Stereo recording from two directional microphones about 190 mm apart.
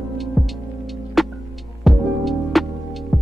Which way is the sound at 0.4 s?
Centre (ahead or behind).